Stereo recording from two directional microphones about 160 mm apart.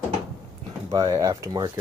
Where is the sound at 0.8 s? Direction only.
20° right (ahead or behind).